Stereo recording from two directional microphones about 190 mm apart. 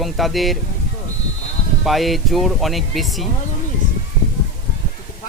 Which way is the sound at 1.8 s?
Centre (ahead or behind).